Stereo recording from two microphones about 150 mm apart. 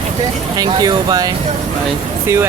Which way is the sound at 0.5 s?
25° right (ahead or behind).